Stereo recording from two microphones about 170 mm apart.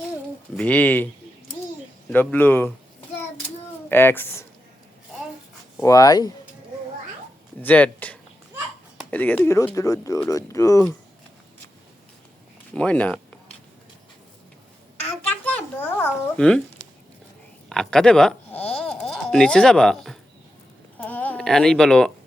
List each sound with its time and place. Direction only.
0.5 s speech: 10° left (ahead or behind)
2.1 s speech: 10° left (ahead or behind)
3.8 s speech: 10° left (ahead or behind)
5.8 s speech: 20° left (ahead or behind)
7.6 s speech: 10° left (ahead or behind)
12.7 s speech: 5° left (ahead or behind)
15.3 s a sound: 10° left (ahead or behind)
17.7 s speech: 5° left (ahead or behind)
21.0 s a sound: 10° left (ahead or behind)